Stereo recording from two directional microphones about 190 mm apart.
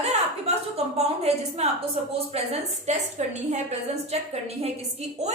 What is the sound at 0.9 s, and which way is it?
A woman's voice, 35° right (ahead or behind).